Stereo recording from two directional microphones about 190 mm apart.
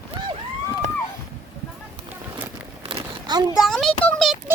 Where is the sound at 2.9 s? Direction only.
20° right (ahead or behind).